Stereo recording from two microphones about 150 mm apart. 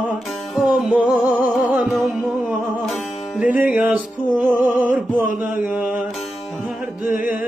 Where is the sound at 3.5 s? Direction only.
10° right (ahead or behind).